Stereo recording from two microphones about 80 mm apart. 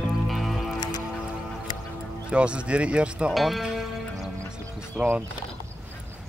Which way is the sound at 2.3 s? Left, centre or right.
Centre.